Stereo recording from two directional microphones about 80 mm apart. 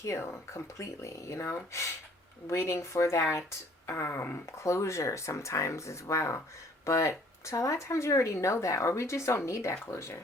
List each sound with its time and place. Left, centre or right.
0.0 s speech: left